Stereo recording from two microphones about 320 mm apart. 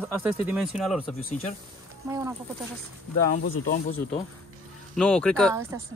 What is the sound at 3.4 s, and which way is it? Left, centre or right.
Speech, left.